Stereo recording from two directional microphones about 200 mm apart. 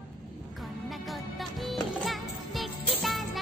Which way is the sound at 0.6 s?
Centre (ahead or behind).